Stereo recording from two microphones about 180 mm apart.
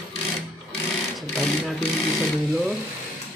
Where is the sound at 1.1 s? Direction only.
Centre (ahead or behind).